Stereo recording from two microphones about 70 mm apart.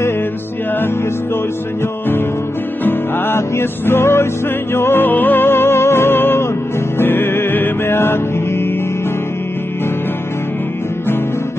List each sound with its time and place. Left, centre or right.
2.8 s music: left